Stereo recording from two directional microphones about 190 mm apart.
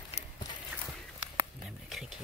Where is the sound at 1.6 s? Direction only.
Centre (ahead or behind).